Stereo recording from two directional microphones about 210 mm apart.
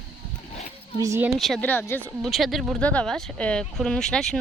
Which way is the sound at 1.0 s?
10° right (ahead or behind).